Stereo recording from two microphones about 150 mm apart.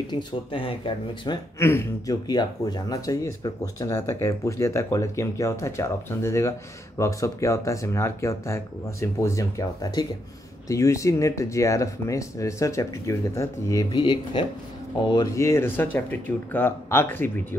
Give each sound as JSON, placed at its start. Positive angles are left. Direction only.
{"t": 0.1, "sound": "speech", "side_deg": 35}
{"t": 1.6, "sound": "speech", "side_deg": 15}
{"t": 2.2, "sound": "speech", "side_deg": 25}